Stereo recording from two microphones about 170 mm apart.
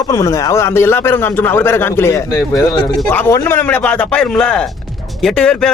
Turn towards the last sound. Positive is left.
turn(degrees=5)  # may be behind; listen again after turning